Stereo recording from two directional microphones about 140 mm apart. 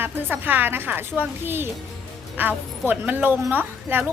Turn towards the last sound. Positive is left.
turn(degrees=-15)  # may be behind; listen again after turning